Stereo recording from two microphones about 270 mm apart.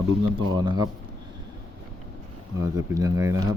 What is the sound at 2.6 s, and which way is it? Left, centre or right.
Speech, centre.